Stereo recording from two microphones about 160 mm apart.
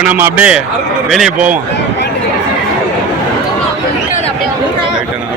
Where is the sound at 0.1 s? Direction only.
10° right (ahead or behind).